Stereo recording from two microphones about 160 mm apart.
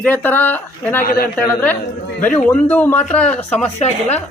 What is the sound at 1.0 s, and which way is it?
Speech, 70° left (ahead or behind).